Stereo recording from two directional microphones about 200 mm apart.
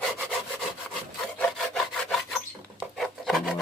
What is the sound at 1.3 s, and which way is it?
Rub, 5° left (ahead or behind).